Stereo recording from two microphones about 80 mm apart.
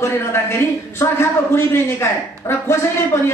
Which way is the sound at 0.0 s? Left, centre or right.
Left.